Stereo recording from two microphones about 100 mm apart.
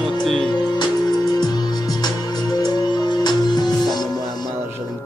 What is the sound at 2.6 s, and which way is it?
Music, 45° left (ahead or behind).